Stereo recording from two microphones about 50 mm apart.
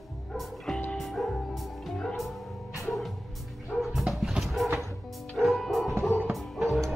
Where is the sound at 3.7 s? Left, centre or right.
Centre.